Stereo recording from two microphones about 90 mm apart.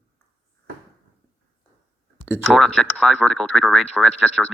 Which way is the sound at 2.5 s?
5° left (ahead or behind).